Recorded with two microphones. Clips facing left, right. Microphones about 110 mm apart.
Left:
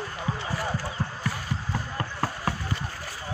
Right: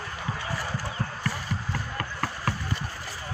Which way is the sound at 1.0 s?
15° left (ahead or behind).